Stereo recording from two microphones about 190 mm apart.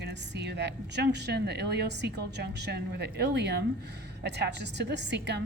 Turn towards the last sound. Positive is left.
turn(degrees=-65)  # may be behind; listen again after turning